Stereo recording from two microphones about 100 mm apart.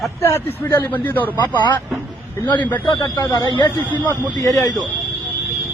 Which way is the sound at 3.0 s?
35° left (ahead or behind).